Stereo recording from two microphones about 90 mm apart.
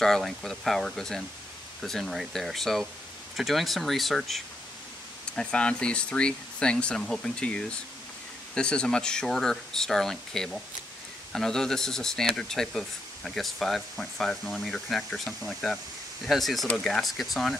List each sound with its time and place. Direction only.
0.0 s speech: 5° left (ahead or behind)